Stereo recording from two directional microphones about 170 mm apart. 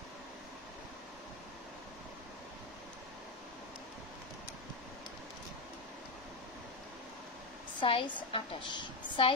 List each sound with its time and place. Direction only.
7.8 s a woman's voice: 30° left (ahead or behind)